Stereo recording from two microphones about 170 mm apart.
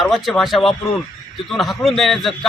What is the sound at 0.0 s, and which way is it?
A man's voice, centre (ahead or behind).